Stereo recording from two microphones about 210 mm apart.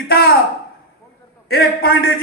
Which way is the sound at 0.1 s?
45° left (ahead or behind).